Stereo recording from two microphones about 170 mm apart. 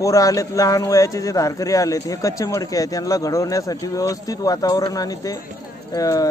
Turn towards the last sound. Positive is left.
turn(degrees=20)  # may be behind; listen again after turning